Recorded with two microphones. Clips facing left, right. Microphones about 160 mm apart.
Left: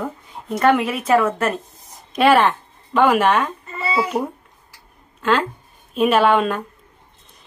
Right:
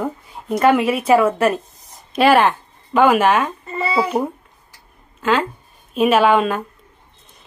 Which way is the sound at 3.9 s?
30° right (ahead or behind).